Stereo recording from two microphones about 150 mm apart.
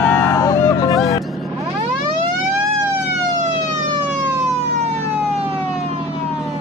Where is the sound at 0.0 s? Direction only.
20° left (ahead or behind).